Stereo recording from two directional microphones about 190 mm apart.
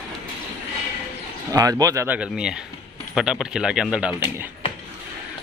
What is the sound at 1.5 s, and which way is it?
Speech, 20° right (ahead or behind).